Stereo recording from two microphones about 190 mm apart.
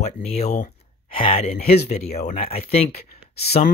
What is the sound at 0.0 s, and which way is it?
Speech, 35° left (ahead or behind).